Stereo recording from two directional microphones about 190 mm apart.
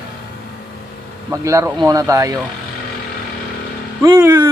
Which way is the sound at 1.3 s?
15° right (ahead or behind).